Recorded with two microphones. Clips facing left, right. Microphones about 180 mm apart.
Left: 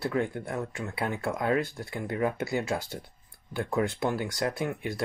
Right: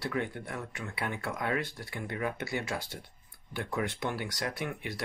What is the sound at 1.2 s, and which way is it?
Speech, 25° left (ahead or behind).